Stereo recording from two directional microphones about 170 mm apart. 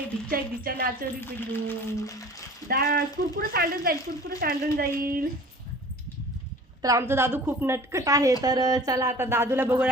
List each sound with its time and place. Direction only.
0.3 s speech: 60° right (ahead or behind)
1.2 s speech: 10° left (ahead or behind)
2.6 s speech: 60° right (ahead or behind)
6.8 s speech: 15° right (ahead or behind)